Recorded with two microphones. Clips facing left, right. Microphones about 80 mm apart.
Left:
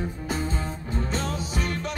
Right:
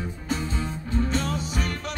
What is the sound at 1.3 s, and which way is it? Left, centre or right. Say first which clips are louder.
Music: right 1 dB; right.